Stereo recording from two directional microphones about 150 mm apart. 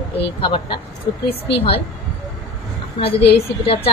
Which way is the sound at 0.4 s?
35° left (ahead or behind).